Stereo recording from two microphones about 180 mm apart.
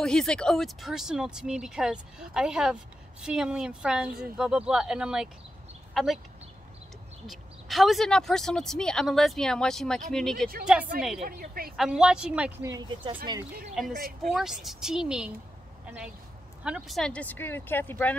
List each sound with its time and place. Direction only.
0.0 s speech: 5° left (ahead or behind)
7.2 s speech: centre (ahead or behind)
11.2 s a woman's voice: 55° right (ahead or behind)
11.7 s speech: 5° right (ahead or behind)
12.7 s speech: 25° right (ahead or behind)
13.8 s speech: centre (ahead or behind)
16.6 s speech: 5° right (ahead or behind)